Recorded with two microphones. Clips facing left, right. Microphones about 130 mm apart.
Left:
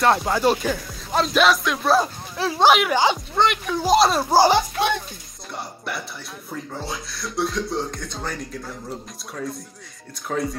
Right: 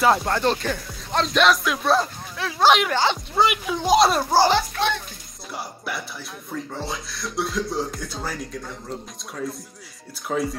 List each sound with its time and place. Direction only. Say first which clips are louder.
0.0 s speech: left 1 dB; centre (ahead or behind)
2.3 s speech: left 5 dB; 35° left (ahead or behind)
2.6 s a child's voice: left 1 dB; 10° left (ahead or behind)
3.3 s speech: even; 5° right (ahead or behind)
4.3 s a child's voice: left 2 dB; 15° left (ahead or behind)
5.5 s speech: even; centre (ahead or behind)